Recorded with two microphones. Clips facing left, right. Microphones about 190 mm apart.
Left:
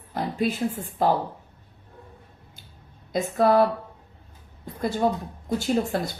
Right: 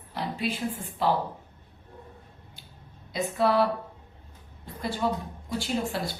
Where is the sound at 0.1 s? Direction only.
45° left (ahead or behind).